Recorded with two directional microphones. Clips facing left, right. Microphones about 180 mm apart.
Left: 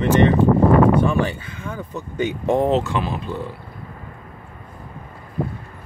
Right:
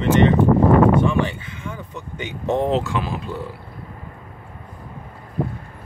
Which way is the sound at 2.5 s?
5° left (ahead or behind).